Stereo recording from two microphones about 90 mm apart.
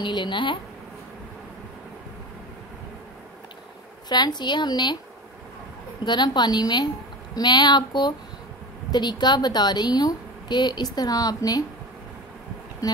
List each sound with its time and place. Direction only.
0.0 s speech: 60° left (ahead or behind)
4.4 s a woman's voice: 55° left (ahead or behind)
6.0 s a woman's voice: 55° left (ahead or behind)
12.8 s speech: 40° left (ahead or behind)